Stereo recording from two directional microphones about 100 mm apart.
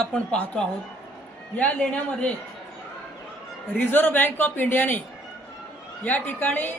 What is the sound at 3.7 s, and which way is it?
A woman's voice, 20° left (ahead or behind).